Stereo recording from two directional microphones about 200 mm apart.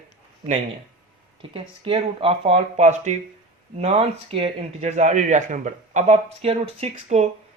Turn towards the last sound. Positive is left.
turn(degrees=-35)  # may be behind; listen again after turning